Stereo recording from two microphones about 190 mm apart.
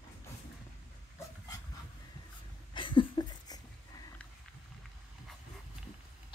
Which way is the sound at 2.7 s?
25° left (ahead or behind).